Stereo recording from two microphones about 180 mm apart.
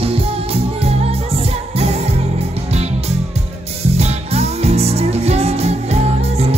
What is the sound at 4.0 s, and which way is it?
Music, 35° right (ahead or behind).